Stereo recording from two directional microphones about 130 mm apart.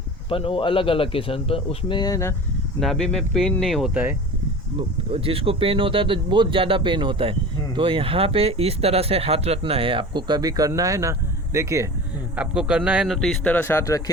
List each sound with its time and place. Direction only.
0.3 s a man's voice: 45° left (ahead or behind); by 2.3 s 25° left (ahead or behind)
2.8 s speech: 5° left (ahead or behind)
4.8 s speech: 45° right (ahead or behind); by 11.9 s 25° right (ahead or behind)
12.4 s a man's voice: 5° right (ahead or behind)
13.1 s speech: 5° left (ahead or behind)